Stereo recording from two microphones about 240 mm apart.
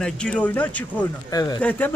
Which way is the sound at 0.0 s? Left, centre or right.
Centre.